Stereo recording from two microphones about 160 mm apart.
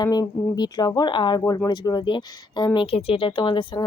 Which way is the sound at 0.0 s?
25° left (ahead or behind).